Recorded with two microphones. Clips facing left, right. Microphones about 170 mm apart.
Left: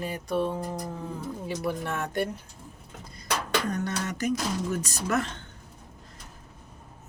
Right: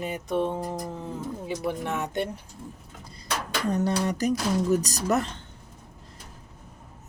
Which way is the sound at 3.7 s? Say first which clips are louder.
Right 5 dB; 30° right (ahead or behind).